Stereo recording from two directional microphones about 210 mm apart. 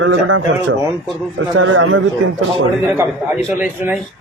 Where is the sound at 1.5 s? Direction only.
70° right (ahead or behind).